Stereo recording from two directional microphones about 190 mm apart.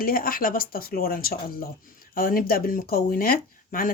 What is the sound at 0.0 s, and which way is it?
Speech, 50° left (ahead or behind).